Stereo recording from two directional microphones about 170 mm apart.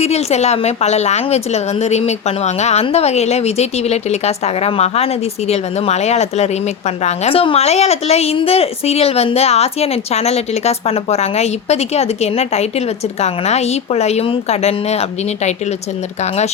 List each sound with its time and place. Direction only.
0.0 s a woman's voice: 40° left (ahead or behind)